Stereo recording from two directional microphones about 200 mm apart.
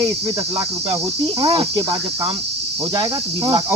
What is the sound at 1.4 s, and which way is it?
Cricket, 25° right (ahead or behind).